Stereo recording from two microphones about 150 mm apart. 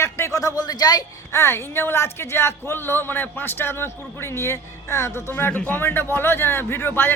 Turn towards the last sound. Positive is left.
turn(degrees=15)  # may be behind; listen again after turning